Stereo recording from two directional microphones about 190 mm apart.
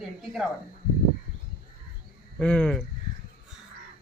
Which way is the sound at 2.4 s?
5° left (ahead or behind).